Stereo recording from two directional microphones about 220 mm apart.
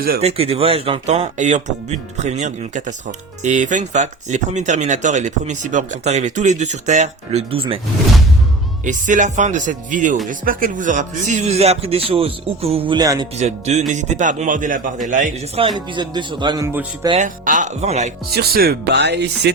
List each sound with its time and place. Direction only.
0.2 s speech: 25° right (ahead or behind)
8.8 s speech: 35° right (ahead or behind); by 13.2 s 20° right (ahead or behind)
13.3 s speech: 30° right (ahead or behind); by 17.1 s 15° right (ahead or behind)
17.1 s speech: 35° right (ahead or behind)
18.3 s speech: 45° right (ahead or behind)